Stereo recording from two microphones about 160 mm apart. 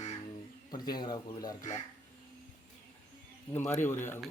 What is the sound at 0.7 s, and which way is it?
Speech, 25° left (ahead or behind).